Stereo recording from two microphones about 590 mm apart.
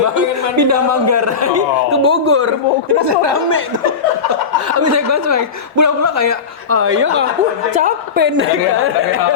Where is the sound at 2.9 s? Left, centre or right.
Right.